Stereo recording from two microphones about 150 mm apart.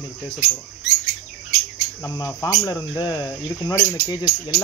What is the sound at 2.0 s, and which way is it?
Speech, 25° left (ahead or behind).